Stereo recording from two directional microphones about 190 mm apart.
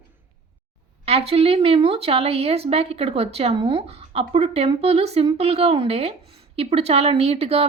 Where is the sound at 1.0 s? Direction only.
30° right (ahead or behind).